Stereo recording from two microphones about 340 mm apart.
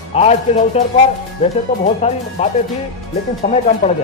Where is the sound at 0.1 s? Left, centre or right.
Centre.